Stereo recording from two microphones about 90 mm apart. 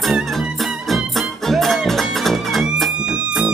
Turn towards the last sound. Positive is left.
turn(degrees=-10)  # may be behind; listen again after turning